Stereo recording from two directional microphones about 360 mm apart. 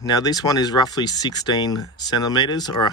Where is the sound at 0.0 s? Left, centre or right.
Centre.